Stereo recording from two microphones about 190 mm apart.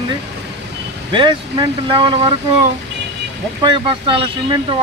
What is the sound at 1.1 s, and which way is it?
Speech, 25° right (ahead or behind).